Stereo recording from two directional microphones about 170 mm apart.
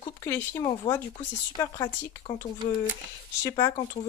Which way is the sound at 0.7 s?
25° left (ahead or behind).